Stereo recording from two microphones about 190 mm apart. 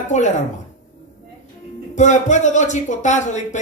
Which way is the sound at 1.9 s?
40° left (ahead or behind).